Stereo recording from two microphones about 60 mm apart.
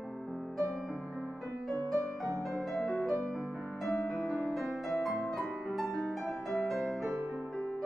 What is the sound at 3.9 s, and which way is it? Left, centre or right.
Music, left.